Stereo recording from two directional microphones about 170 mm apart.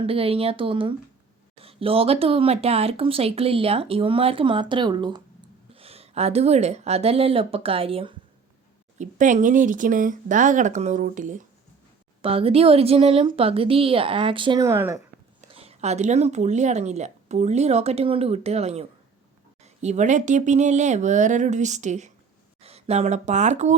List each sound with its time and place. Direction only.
0.0 s speech: 35° right (ahead or behind)
9.0 s speech: 45° right (ahead or behind)
12.2 s speech: 35° right (ahead or behind); by 15.0 s 15° right (ahead or behind)
15.4 s speech: 40° right (ahead or behind)